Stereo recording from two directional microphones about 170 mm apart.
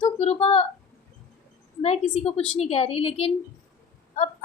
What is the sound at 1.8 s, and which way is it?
A woman's voice, 40° left (ahead or behind).